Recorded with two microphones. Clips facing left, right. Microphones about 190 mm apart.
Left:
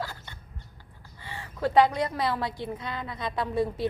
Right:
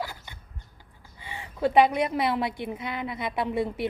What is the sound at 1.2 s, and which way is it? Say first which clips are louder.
A woman's voice: right 3 dB; 20° right (ahead or behind).